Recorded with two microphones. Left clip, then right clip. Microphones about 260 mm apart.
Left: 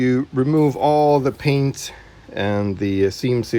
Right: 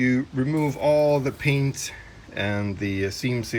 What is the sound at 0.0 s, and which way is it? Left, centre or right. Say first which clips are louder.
Speech: left 5 dB; centre.